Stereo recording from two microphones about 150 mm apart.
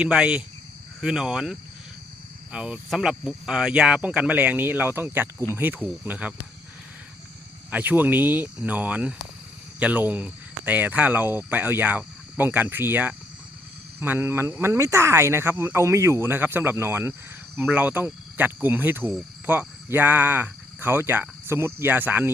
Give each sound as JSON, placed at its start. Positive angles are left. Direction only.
{"t": 0.0, "sound": "speech", "side_deg": -5}
{"t": 7.7, "sound": "speech", "side_deg": -10}